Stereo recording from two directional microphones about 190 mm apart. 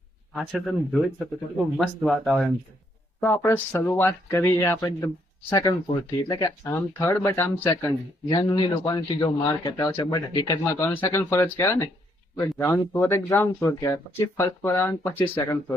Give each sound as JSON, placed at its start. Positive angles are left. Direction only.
{"t": 0.3, "sound": "speech", "side_deg": 0}
{"t": 3.2, "sound": "a man's voice", "side_deg": 10}
{"t": 10.6, "sound": "speech", "side_deg": 10}